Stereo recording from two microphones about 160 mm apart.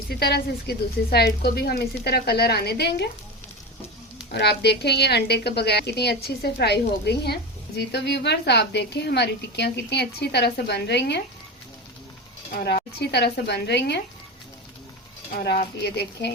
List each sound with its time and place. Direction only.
0.1 s a woman's voice: 80° left
4.3 s a woman's voice: 90° left
13.0 s a woman's voice: 90° left
15.4 s a woman's voice: 90° left